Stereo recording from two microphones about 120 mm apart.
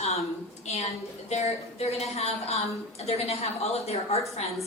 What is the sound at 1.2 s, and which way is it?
A woman's voice, 65° left (ahead or behind).